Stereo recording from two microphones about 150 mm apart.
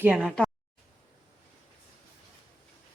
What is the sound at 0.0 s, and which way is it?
Speech, 10° right (ahead or behind).